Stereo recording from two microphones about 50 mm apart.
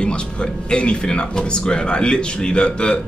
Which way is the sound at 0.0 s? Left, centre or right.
Centre.